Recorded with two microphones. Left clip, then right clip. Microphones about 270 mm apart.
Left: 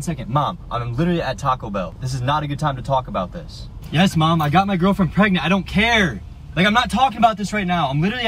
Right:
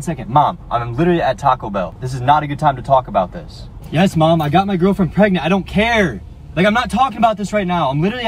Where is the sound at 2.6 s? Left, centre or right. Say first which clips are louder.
Right 8 dB; right.